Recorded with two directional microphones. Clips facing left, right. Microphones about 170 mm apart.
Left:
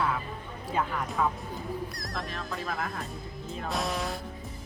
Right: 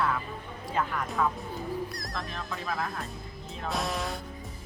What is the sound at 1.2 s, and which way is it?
A woman's voice, 10° left (ahead or behind).